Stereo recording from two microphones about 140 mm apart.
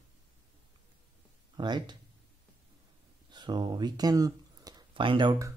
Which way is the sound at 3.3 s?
30° right (ahead or behind).